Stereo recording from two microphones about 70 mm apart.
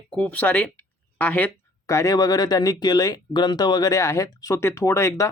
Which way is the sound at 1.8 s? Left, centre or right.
Left.